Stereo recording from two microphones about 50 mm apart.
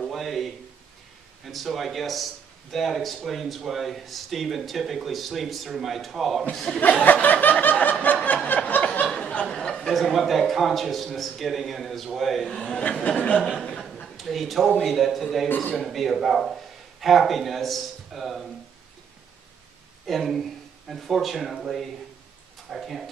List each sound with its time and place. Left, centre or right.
0.0 s a sound: centre
1.4 s speech: centre
6.5 s speech: centre
6.8 s snicker: left
8.5 s a sound: left
9.3 s a sound: left
9.6 s speech: centre
9.9 s speech: centre
13.0 s speech: left
13.6 s chuckle: centre
14.0 s speech: centre
15.4 s a man's voice: left
15.8 s speech: centre
20.1 s speech: centre